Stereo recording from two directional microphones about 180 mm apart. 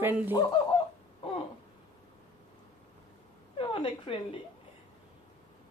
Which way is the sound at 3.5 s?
30° left (ahead or behind).